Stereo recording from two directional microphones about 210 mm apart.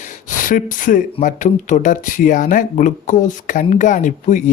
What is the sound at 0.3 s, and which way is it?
Speech, 40° left (ahead or behind).